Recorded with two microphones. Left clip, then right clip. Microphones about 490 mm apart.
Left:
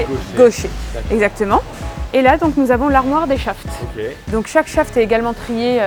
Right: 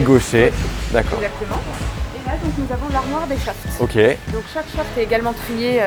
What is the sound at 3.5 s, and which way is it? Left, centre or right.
Speech, left.